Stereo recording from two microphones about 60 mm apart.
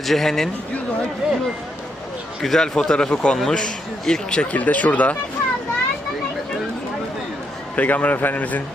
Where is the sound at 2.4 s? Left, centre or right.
Centre.